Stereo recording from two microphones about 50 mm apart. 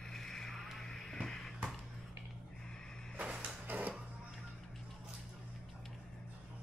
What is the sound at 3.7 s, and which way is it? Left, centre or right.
Music, right.